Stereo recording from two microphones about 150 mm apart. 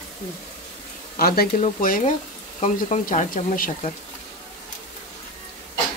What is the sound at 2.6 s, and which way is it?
Speech, 50° left (ahead or behind).